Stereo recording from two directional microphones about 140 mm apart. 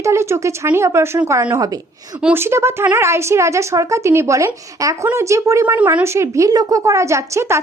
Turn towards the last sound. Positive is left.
turn(degrees=-20)  # may be behind; listen again after turning